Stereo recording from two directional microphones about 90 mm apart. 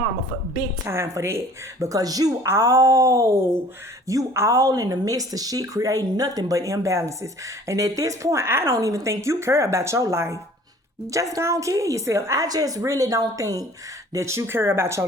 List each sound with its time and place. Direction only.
0.9 s speech: 30° right (ahead or behind)